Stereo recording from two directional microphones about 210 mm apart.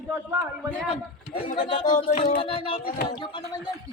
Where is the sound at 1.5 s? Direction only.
25° left (ahead or behind).